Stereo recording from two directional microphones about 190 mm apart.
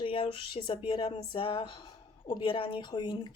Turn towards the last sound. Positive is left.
turn(degrees=25)  # may be behind; listen again after turning